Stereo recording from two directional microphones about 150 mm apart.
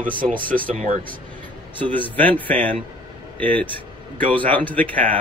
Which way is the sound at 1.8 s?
35° right (ahead or behind).